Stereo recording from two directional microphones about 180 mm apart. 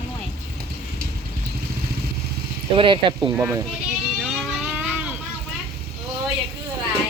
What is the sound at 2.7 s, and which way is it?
Speech, 30° right (ahead or behind).